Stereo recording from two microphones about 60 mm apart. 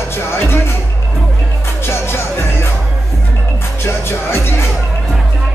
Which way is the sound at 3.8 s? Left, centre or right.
Left.